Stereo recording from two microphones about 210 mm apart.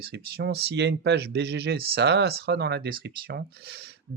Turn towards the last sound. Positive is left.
turn(degrees=-50)  # may be behind; listen again after turning